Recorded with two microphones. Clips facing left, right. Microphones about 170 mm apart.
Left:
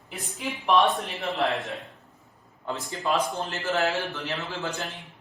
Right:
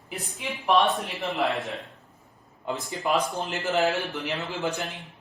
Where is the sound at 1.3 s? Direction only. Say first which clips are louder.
Even; centre (ahead or behind).